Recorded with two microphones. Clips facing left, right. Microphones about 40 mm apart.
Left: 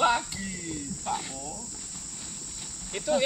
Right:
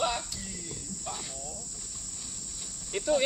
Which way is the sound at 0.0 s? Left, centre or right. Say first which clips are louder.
Left 6 dB; left.